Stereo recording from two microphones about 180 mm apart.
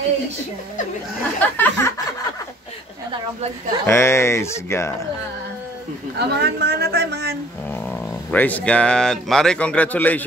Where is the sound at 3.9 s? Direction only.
15° left (ahead or behind).